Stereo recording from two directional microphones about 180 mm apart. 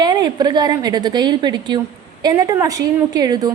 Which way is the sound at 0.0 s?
20° right (ahead or behind).